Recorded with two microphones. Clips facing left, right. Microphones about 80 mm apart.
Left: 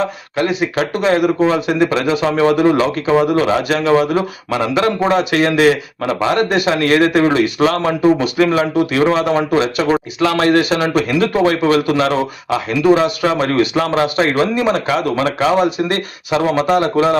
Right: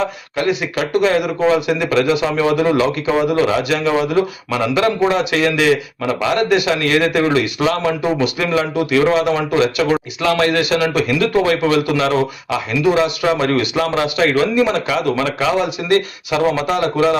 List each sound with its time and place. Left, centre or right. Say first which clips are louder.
0.0 s a man's voice: left 1 dB; left